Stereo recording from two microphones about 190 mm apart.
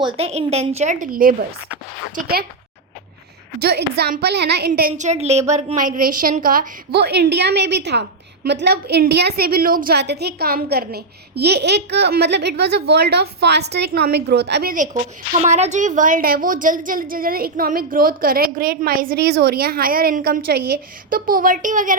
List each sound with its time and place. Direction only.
0.0 s a woman's voice: 30° right (ahead or behind); by 2.4 s 55° right (ahead or behind)
3.6 s a woman's voice: 55° right (ahead or behind)
15.4 s a woman's voice: 35° right (ahead or behind)